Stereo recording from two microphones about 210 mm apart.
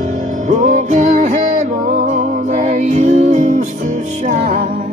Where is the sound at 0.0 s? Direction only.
35° right (ahead or behind).